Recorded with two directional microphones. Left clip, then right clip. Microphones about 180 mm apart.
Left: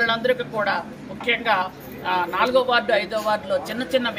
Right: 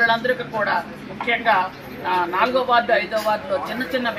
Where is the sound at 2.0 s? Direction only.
25° left (ahead or behind).